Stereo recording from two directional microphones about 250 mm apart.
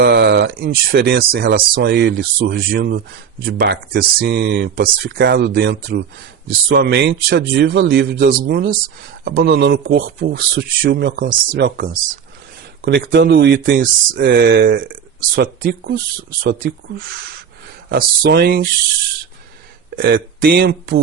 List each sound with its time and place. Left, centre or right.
0.0 s speech: right
17.8 s speech: right
20.0 s speech: right